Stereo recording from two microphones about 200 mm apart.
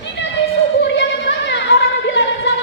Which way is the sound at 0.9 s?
60° left (ahead or behind).